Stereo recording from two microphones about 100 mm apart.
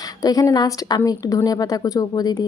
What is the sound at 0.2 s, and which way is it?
A woman's voice, 35° left (ahead or behind).